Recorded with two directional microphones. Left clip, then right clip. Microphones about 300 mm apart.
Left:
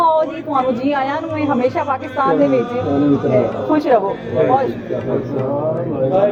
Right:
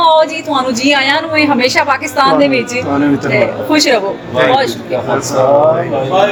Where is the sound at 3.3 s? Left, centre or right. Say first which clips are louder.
Right 4 dB; centre.